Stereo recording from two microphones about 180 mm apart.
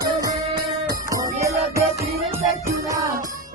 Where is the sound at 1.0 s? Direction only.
20° right (ahead or behind).